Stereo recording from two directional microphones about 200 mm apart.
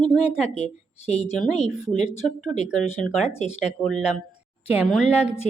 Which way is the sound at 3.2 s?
35° left (ahead or behind).